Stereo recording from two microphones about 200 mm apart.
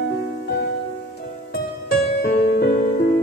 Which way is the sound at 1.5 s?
50° left (ahead or behind).